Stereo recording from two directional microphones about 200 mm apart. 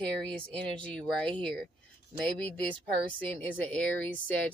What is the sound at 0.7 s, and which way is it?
Speech, 5° left (ahead or behind).